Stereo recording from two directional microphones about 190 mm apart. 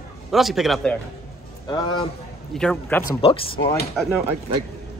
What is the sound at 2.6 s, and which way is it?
Speech, 5° left (ahead or behind).